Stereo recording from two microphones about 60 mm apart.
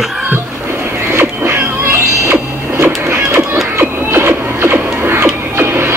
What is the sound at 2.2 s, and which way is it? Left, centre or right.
Printer, right.